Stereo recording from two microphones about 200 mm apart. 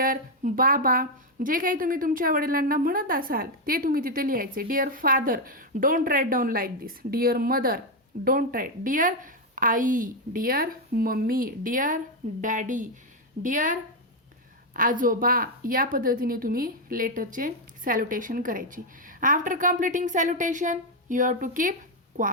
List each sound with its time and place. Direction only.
0.0 s a woman's voice: 45° right (ahead or behind)